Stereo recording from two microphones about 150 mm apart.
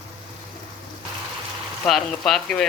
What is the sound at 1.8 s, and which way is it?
Speech, centre (ahead or behind).